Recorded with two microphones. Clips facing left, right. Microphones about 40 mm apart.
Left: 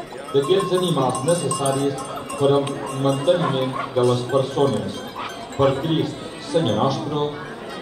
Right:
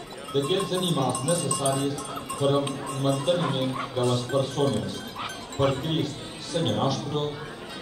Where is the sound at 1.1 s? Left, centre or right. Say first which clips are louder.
Left 6 dB; left.